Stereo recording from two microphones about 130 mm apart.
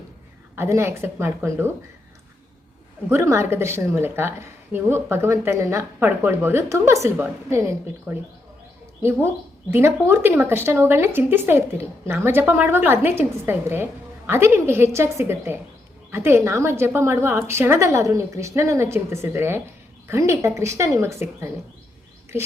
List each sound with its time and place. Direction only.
0.5 s a woman's voice: 20° right (ahead or behind)
3.1 s a woman's voice: 20° right (ahead or behind)
9.7 s a woman's voice: 20° right (ahead or behind)